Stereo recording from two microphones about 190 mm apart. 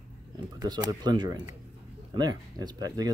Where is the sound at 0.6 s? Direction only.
20° right (ahead or behind).